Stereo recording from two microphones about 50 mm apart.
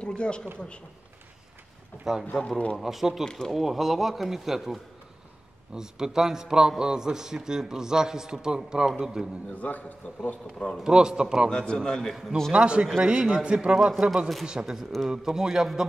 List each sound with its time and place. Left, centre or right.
0.0 s speech: centre
2.1 s a man's voice: centre
3.3 s a man's voice: centre
3.5 s speech: centre
5.8 s a man's voice: centre
9.6 s a man's voice: left
10.8 s a man's voice: centre
11.5 s a man's voice: centre
12.5 s a man's voice: right